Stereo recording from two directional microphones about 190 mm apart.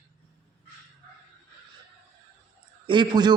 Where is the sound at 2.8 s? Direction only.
25° right (ahead or behind).